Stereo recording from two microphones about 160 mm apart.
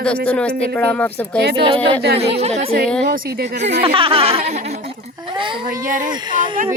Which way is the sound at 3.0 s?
80° right.